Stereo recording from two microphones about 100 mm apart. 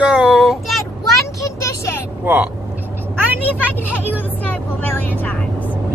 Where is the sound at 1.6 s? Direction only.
25° left (ahead or behind).